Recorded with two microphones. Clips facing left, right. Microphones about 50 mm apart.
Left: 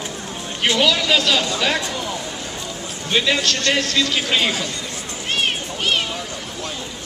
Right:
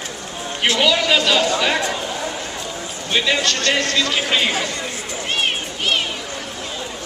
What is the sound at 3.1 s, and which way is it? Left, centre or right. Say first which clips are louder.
Speech: even; centre.